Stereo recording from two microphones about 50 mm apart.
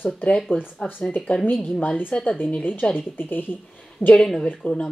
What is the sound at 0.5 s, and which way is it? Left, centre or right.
Speech, left.